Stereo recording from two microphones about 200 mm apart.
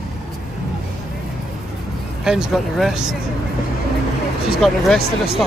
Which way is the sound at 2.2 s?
5° right (ahead or behind).